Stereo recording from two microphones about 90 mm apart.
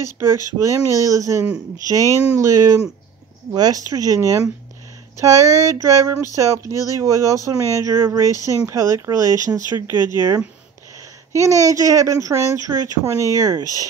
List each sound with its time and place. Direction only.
0.0 s speech: 35° right (ahead or behind)